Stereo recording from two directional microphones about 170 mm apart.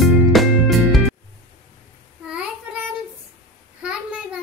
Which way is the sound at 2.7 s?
10° right (ahead or behind).